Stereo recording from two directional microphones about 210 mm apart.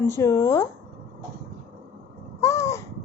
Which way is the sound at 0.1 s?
15° left (ahead or behind).